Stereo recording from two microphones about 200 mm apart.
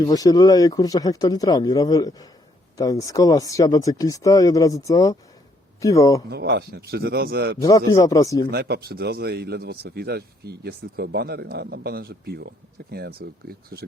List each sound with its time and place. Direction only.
0.0 s speech: 20° left (ahead or behind)
6.3 s a man's voice: 55° right (ahead or behind)
7.6 s speech: 15° left (ahead or behind)
8.4 s a man's voice: 55° right (ahead or behind)